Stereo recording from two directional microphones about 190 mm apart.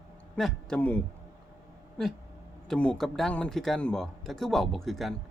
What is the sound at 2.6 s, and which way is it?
A man's voice, 5° left (ahead or behind).